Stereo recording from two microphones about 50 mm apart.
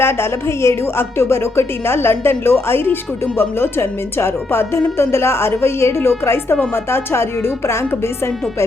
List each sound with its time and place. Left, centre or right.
0.0 s speech: left